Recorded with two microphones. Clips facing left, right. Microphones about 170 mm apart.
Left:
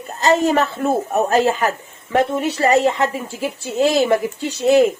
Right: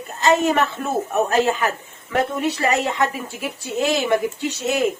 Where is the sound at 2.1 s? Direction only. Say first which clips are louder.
Left 3 dB; 30° left (ahead or behind).